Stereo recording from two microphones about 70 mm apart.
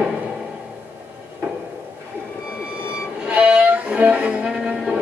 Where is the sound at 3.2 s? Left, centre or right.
Centre.